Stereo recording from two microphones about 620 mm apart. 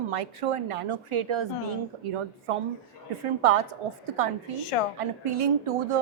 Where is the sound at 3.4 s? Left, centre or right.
Right.